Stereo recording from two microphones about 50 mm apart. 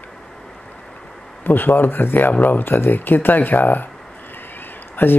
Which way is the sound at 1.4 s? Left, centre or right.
Left.